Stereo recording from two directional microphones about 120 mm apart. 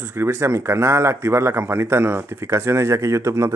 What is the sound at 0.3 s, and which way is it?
A man's voice, 25° right (ahead or behind).